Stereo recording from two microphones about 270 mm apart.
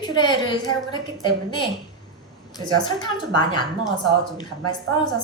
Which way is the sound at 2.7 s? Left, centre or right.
Centre.